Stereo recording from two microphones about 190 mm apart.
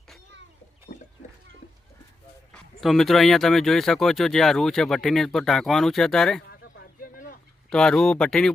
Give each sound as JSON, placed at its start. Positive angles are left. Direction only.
{"t": 2.5, "sound": "speech", "side_deg": 0}
{"t": 6.5, "sound": "a sound", "side_deg": 55}
{"t": 7.7, "sound": "speech", "side_deg": 5}